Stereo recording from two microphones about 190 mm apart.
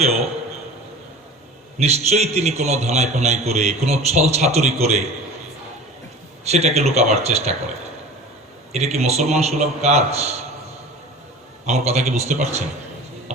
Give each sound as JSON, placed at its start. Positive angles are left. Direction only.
{"t": 1.8, "sound": "a man's voice", "side_deg": -35}
{"t": 6.4, "sound": "a man's voice", "side_deg": -35}
{"t": 8.7, "sound": "a man's voice", "side_deg": -35}
{"t": 11.6, "sound": "a man's voice", "side_deg": -35}